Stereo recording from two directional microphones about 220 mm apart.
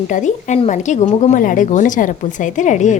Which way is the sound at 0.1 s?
35° left (ahead or behind).